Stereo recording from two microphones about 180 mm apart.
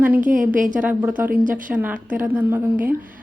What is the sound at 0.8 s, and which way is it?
Speech, 10° right (ahead or behind).